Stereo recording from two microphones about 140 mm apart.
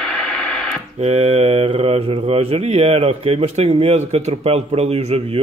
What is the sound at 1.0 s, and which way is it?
Speech, 45° right (ahead or behind).